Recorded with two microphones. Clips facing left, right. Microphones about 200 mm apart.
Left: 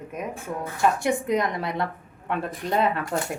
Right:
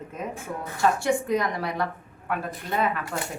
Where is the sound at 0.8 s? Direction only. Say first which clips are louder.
Even; 20° left (ahead or behind).